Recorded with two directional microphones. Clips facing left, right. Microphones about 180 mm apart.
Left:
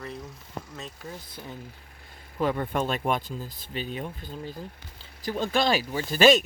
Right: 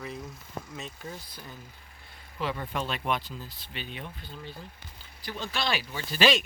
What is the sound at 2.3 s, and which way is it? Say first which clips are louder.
Speech: left 6 dB; 45° left (ahead or behind).